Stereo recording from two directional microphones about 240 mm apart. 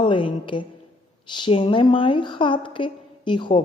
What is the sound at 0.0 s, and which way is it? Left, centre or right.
A woman's voice, left.